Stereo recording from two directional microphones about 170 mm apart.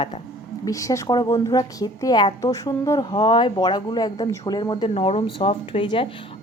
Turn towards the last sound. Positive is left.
turn(degrees=30)  # may be behind; listen again after turning